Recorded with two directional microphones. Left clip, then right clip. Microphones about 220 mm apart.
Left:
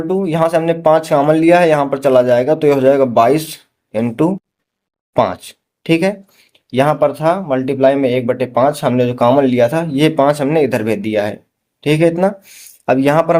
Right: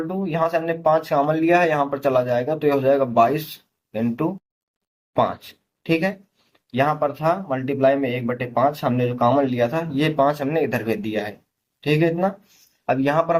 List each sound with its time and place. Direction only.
0.1 s speech: 50° left (ahead or behind)
5.8 s speech: 50° left (ahead or behind)